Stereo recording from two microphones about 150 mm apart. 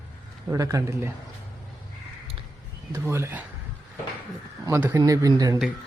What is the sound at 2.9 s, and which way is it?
Speech, 15° right (ahead or behind).